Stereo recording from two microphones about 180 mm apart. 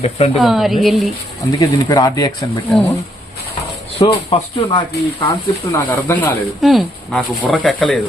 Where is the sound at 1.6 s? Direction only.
20° left (ahead or behind).